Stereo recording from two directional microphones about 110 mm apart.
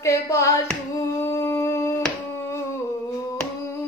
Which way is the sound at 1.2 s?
25° left (ahead or behind).